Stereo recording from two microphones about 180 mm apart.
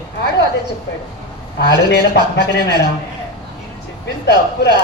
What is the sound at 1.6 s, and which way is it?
A woman's voice, 65° left (ahead or behind).